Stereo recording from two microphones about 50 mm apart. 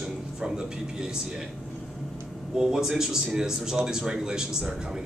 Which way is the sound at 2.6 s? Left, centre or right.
Centre.